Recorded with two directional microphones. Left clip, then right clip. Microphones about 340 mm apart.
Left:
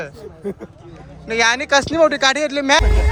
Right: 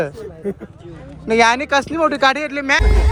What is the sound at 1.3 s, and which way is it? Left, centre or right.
A man's voice, centre.